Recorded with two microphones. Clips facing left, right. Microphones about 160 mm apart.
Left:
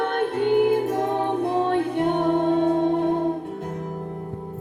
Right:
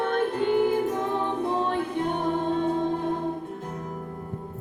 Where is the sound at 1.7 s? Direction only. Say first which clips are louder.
Left 5 dB; 65° left (ahead or behind).